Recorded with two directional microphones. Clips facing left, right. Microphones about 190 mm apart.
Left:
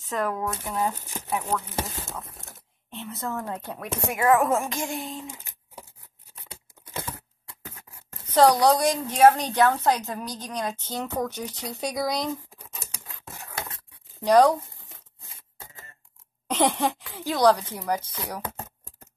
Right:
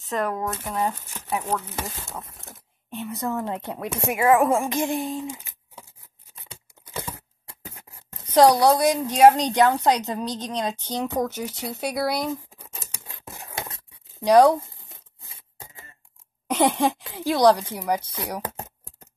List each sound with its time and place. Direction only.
0.0 s speech: centre (ahead or behind)
2.9 s a woman's voice: 15° right (ahead or behind)
4.2 s a woman's voice: 5° right (ahead or behind)
4.7 s speech: 45° right (ahead or behind)
8.3 s a woman's voice: 10° right (ahead or behind)
13.3 s a sound: 15° right (ahead or behind)
14.2 s a woman's voice: 10° right (ahead or behind)
16.4 s a sound: 10° right (ahead or behind)
17.1 s a woman's voice: 15° right (ahead or behind)